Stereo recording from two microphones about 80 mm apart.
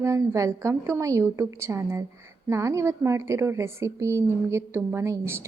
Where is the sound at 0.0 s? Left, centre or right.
Right.